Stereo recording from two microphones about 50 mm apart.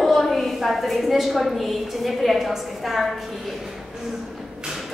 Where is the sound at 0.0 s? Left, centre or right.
Centre.